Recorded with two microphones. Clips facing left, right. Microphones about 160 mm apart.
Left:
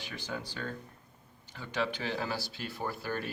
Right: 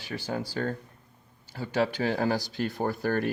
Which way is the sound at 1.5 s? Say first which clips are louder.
Right 7 dB; 35° right (ahead or behind).